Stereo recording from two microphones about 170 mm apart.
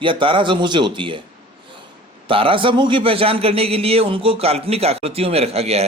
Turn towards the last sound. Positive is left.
turn(degrees=-35)  # may be behind; listen again after turning